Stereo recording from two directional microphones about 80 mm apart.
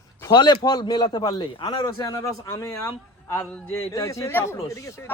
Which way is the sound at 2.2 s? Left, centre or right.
Left.